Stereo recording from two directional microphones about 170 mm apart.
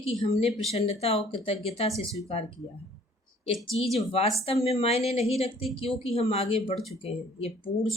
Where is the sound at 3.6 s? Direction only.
Centre (ahead or behind).